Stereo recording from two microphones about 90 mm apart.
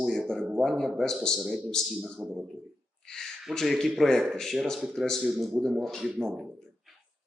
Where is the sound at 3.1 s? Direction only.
5° left (ahead or behind).